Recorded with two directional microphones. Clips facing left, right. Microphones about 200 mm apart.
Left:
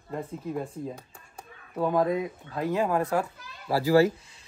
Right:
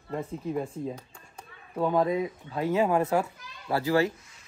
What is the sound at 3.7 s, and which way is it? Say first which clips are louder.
Speech: left 2 dB; 5° left (ahead or behind).